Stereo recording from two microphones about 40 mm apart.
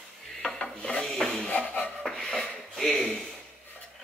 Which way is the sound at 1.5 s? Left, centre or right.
Left.